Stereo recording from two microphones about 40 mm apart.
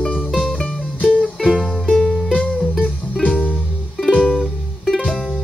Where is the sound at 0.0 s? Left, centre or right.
Left.